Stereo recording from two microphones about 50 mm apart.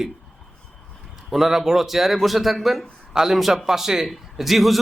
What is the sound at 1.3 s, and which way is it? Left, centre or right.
Speech, centre.